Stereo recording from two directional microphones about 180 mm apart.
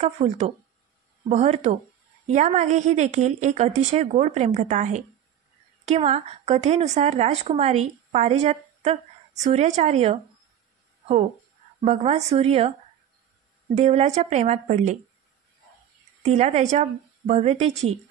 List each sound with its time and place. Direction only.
0.0 s a woman's voice: 40° right (ahead or behind)
11.8 s a woman's voice: 35° right (ahead or behind)
13.7 s a woman's voice: 35° right (ahead or behind)
16.2 s a woman's voice: 35° right (ahead or behind)